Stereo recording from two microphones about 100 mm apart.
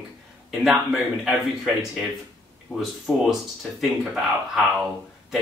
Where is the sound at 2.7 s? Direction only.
20° right (ahead or behind).